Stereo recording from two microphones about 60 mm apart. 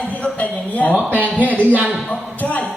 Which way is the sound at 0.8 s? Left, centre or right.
Left.